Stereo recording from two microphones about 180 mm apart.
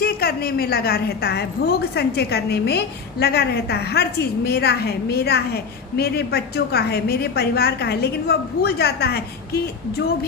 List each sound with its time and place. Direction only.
0.0 s a woman's voice: 60° left (ahead or behind)